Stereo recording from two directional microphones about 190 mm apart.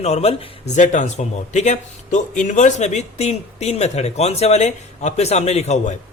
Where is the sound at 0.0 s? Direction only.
35° left (ahead or behind).